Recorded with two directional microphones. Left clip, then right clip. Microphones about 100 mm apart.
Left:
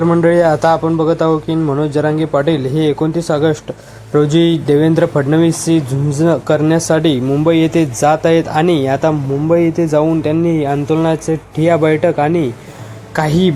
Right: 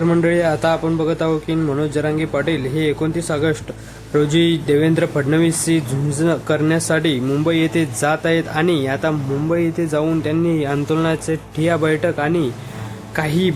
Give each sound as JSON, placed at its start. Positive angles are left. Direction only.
{"t": 0.0, "sound": "speech", "side_deg": 5}
{"t": 0.3, "sound": "speech", "side_deg": 25}